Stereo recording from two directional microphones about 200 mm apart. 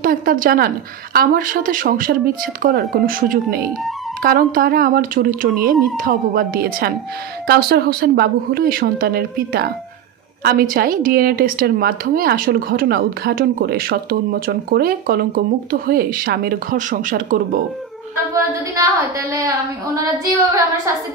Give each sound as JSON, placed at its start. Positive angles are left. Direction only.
{"t": 0.0, "sound": "a woman's voice", "side_deg": -45}
{"t": 18.3, "sound": "a woman's voice", "side_deg": -15}